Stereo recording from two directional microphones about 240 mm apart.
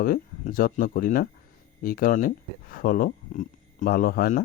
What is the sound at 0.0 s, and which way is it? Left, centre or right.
Speech, left.